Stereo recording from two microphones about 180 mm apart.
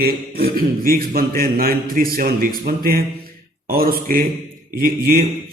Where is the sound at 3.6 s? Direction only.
55° right (ahead or behind).